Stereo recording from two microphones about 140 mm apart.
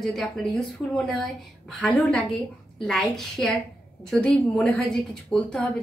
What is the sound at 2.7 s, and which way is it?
A woman's voice, 5° left (ahead or behind).